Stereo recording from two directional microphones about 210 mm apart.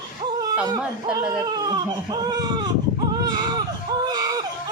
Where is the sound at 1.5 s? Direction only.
20° right (ahead or behind).